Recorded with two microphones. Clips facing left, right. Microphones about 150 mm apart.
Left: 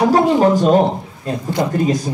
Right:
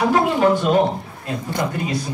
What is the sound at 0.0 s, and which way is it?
A man's voice, 40° left (ahead or behind).